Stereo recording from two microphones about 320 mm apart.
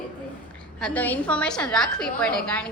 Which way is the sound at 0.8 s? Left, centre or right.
Centre.